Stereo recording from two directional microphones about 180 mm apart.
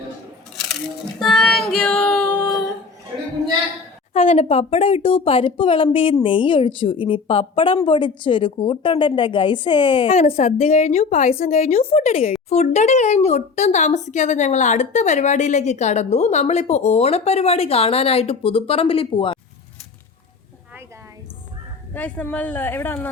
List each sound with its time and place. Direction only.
1.2 s child singing: 5° left (ahead or behind)
4.1 s a woman's voice: 35° left (ahead or behind)
21.9 s speech: 10° left (ahead or behind)